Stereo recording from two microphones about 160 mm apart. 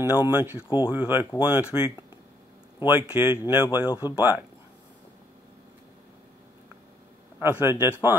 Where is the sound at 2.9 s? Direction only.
10° right (ahead or behind).